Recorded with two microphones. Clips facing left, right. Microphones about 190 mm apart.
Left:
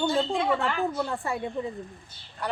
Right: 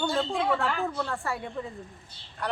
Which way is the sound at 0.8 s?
15° left (ahead or behind).